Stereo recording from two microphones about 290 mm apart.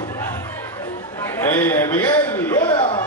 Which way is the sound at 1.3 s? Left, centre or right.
Centre.